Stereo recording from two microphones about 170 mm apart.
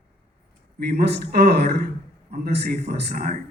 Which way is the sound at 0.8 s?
65° right (ahead or behind).